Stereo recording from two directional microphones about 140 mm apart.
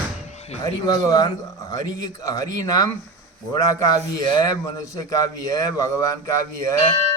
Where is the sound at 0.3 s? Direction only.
50° left (ahead or behind).